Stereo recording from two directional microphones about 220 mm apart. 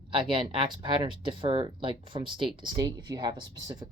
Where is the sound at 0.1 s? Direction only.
20° right (ahead or behind).